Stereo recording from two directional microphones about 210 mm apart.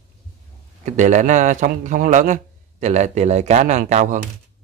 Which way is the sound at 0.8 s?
35° right (ahead or behind).